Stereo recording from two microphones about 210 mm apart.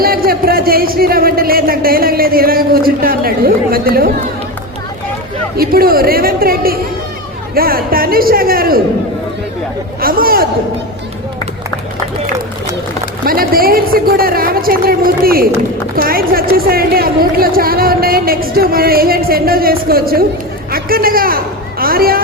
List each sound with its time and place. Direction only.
0.0 s speech: 45° right (ahead or behind)
5.5 s speech: 45° right (ahead or behind)
10.0 s speech: 45° right (ahead or behind)
13.2 s a man's voice: 45° right (ahead or behind)